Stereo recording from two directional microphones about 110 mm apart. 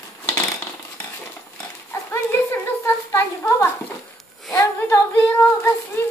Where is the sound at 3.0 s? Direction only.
25° left (ahead or behind).